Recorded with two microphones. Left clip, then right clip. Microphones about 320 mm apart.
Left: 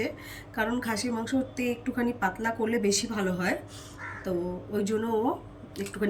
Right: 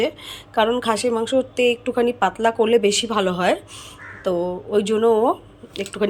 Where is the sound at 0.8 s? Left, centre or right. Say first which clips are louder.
Right 11 dB; centre.